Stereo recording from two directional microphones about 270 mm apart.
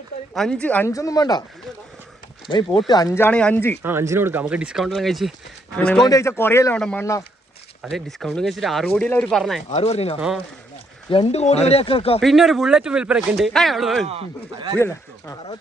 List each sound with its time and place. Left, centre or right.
0.3 s speech: centre
2.5 s speech: centre
3.8 s speech: centre
9.6 s speech: left
10.2 s speech: centre
11.1 s speech: left
12.2 s speech: centre
14.1 s speech: centre
14.8 s speech: centre